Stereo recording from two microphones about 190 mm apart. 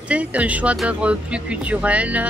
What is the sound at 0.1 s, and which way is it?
Speech, 5° right (ahead or behind).